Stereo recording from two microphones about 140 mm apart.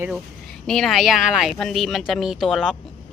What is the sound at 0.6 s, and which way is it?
Speech, centre (ahead or behind).